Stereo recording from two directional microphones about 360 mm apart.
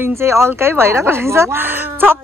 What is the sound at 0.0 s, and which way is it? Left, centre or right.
Speech, centre.